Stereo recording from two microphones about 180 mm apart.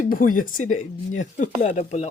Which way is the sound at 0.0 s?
50° left (ahead or behind).